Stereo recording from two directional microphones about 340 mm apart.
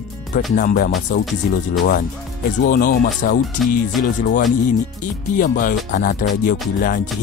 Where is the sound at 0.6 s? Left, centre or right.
Left.